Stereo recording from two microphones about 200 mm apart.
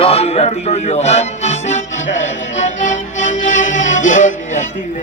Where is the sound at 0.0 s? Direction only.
30° left (ahead or behind).